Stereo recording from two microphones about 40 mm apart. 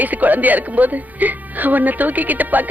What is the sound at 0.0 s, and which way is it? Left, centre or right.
Speech, right.